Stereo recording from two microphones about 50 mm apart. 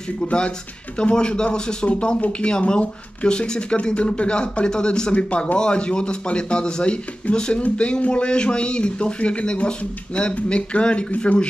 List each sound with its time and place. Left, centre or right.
0.2 s a man's voice: centre